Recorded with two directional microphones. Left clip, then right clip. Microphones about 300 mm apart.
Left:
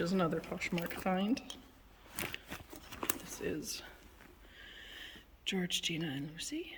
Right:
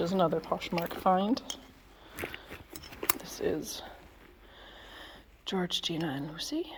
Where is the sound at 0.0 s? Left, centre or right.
Centre.